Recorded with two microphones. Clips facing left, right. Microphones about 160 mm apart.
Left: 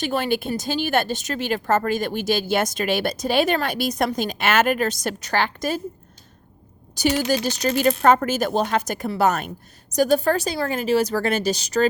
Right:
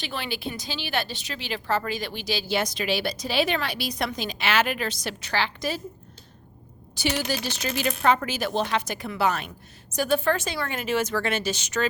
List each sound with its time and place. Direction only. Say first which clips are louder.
0.0 s speech: left 9 dB; 45° left (ahead or behind)
6.9 s a woman's voice: left 6 dB; 45° left (ahead or behind)